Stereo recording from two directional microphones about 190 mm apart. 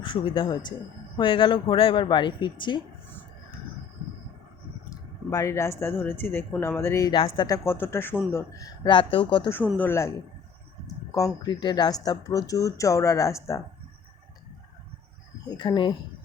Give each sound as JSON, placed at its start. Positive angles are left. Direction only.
{"t": 0.0, "sound": "speech", "side_deg": 25}
{"t": 4.9, "sound": "speech", "side_deg": 15}
{"t": 9.7, "sound": "speech", "side_deg": 10}
{"t": 15.4, "sound": "speech", "side_deg": 25}